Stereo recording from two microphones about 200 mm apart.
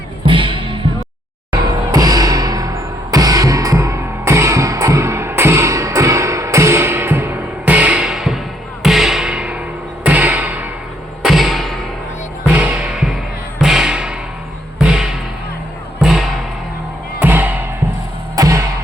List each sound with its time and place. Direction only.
0.3 s music: 25° right (ahead or behind)
1.9 s music: 20° right (ahead or behind); by 8.4 s centre (ahead or behind)
8.8 s a sound: centre (ahead or behind)
10.0 s music: 10° right (ahead or behind)
11.2 s thump: centre (ahead or behind)
12.5 s music: 5° right (ahead or behind)